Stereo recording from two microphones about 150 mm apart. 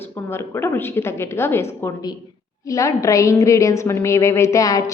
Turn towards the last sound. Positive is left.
turn(degrees=20)  # may be behind; listen again after turning